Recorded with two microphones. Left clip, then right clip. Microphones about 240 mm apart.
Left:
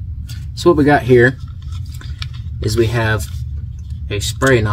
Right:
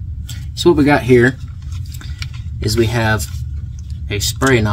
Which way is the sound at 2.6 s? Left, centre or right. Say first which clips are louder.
Even; right.